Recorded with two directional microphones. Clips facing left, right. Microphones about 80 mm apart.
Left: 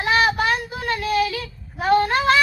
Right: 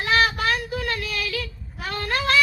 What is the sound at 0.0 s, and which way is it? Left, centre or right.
Child singing, left.